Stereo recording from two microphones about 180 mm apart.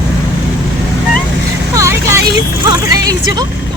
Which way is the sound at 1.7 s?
15° right (ahead or behind).